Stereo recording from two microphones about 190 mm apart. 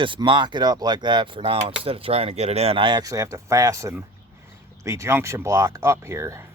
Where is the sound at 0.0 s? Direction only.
25° right (ahead or behind).